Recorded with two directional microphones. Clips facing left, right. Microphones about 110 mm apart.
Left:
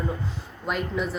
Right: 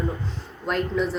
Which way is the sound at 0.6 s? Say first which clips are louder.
Right 3 dB; 5° left (ahead or behind).